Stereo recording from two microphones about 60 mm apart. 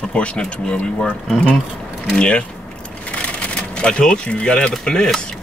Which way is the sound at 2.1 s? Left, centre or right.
Centre.